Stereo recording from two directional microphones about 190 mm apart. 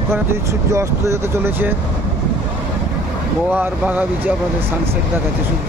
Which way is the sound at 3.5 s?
10° right (ahead or behind).